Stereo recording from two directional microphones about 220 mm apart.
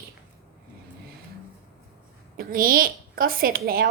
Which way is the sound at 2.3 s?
40° right (ahead or behind).